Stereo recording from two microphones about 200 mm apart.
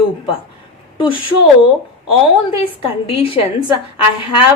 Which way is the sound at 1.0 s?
25° left (ahead or behind).